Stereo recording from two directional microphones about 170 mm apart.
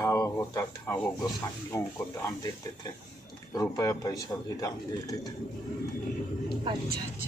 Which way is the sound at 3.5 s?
20° left (ahead or behind).